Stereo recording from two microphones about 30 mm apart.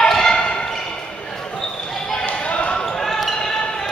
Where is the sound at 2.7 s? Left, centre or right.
Left.